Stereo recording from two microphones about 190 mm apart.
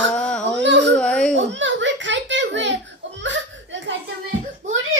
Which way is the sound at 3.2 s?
75° right (ahead or behind).